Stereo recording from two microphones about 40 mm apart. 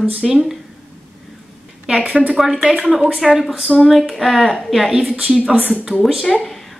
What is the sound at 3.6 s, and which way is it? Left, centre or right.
A woman's voice, centre.